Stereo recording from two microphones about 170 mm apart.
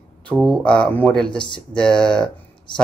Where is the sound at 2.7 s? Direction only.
30° left (ahead or behind).